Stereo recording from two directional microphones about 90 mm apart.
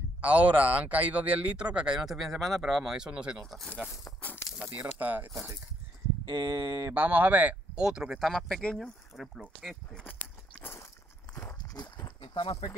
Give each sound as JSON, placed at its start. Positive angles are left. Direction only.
{"t": 0.2, "sound": "speech", "side_deg": -15}
{"t": 3.4, "sound": "speech", "side_deg": 0}
{"t": 4.2, "sound": "a sound", "side_deg": 20}
{"t": 4.6, "sound": "speech", "side_deg": -20}
{"t": 6.2, "sound": "speech", "side_deg": -45}
{"t": 6.9, "sound": "speech", "side_deg": -20}
{"t": 8.2, "sound": "speech", "side_deg": 5}
{"t": 9.1, "sound": "speech", "side_deg": -5}
{"t": 10.0, "sound": "walk", "side_deg": 20}
{"t": 11.6, "sound": "clip-clop", "side_deg": 45}
{"t": 12.2, "sound": "speech", "side_deg": 65}